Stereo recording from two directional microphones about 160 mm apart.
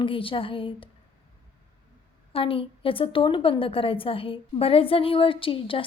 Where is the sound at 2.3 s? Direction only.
35° left (ahead or behind).